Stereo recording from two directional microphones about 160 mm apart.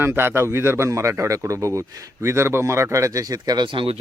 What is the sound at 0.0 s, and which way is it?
A man's voice, 15° right (ahead or behind).